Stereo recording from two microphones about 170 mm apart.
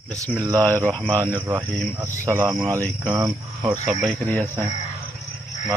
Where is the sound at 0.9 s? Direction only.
10° left (ahead or behind).